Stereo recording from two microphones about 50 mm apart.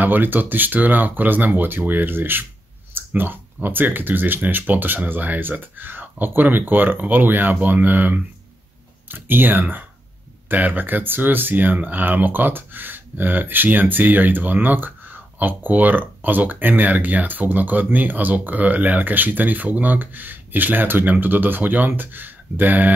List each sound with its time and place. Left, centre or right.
0.0 s speech: right